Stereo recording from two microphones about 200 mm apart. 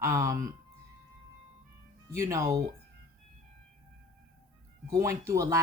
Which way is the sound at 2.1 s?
15° right (ahead or behind).